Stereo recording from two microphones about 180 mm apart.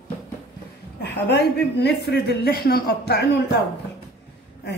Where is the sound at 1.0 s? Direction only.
70° left (ahead or behind).